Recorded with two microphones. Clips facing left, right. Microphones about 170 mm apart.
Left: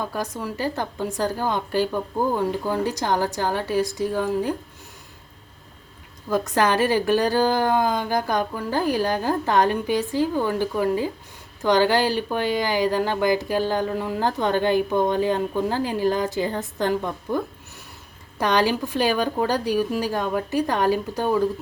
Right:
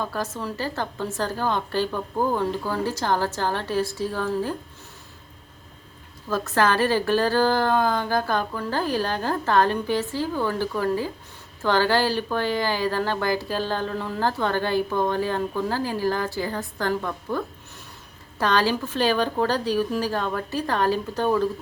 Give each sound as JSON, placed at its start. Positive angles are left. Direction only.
{"t": 0.0, "sound": "speech", "side_deg": 15}
{"t": 6.3, "sound": "speech", "side_deg": 15}